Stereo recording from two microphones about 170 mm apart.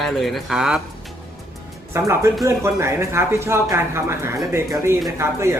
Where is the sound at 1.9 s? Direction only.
15° right (ahead or behind).